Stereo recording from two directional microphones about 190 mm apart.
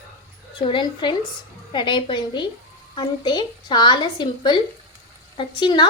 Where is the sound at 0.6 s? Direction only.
25° left (ahead or behind).